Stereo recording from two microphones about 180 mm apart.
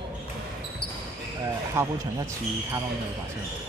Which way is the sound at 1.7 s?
15° right (ahead or behind).